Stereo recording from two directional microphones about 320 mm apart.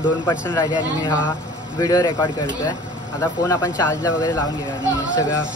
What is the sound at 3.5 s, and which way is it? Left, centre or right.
Speech, centre.